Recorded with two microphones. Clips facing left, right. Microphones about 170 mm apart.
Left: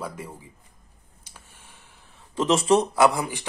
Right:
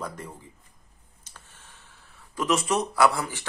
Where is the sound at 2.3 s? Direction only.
25° left (ahead or behind).